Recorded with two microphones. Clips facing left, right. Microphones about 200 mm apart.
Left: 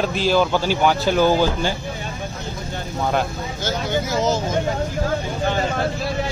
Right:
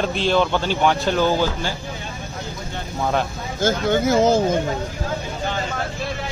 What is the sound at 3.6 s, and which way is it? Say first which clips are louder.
Speech: right 5 dB; 50° right (ahead or behind).